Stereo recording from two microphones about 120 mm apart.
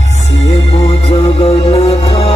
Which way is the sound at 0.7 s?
50° left (ahead or behind).